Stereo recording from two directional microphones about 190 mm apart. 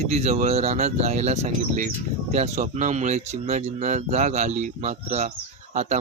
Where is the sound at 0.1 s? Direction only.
35° right (ahead or behind).